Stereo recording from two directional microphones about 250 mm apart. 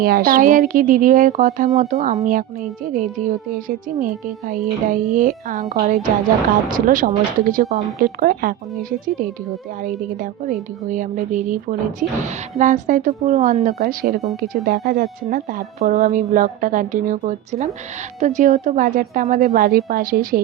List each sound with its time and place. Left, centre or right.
0.0 s speech: right
4.0 s speech: right
9.8 s speech: right